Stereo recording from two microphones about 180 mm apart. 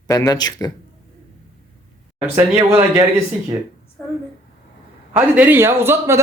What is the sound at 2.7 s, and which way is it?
Speech, 10° right (ahead or behind).